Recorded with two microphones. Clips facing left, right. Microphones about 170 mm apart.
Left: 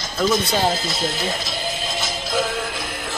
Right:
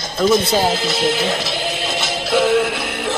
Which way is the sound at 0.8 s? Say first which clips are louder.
Right 7 dB; 70° right (ahead or behind).